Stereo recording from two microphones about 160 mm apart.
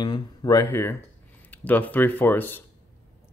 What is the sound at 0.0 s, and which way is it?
Speech, 25° left (ahead or behind).